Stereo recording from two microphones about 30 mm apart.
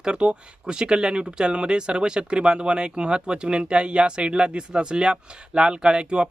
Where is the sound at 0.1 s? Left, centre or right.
Right.